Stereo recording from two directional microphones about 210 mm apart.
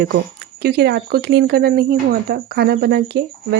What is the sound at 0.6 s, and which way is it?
Speech, 50° right (ahead or behind).